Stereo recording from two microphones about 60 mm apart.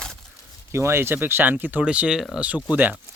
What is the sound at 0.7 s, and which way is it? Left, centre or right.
Speech, right.